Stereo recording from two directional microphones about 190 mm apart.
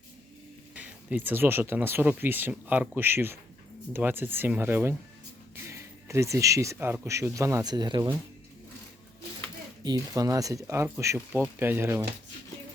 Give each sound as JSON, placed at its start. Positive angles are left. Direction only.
{"t": 0.7, "sound": "speech", "side_deg": -5}
{"t": 9.8, "sound": "speech", "side_deg": -20}